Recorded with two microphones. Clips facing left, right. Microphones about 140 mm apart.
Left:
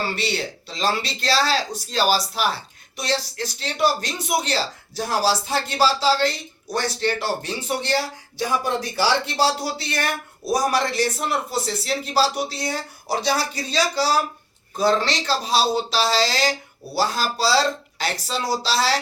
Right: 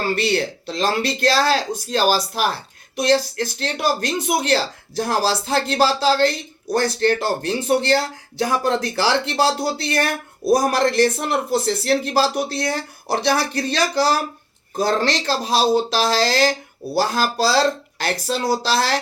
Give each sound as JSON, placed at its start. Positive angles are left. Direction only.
{"t": 0.0, "sound": "speech", "side_deg": -55}
{"t": 3.6, "sound": "speech", "side_deg": -55}